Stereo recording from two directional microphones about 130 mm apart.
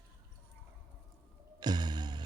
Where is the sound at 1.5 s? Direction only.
35° right (ahead or behind).